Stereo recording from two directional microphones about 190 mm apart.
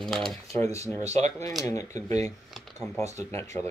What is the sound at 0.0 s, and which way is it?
Speech, centre (ahead or behind).